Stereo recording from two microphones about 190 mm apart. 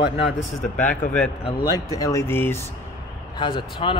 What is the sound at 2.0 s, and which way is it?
Speech, 15° left (ahead or behind).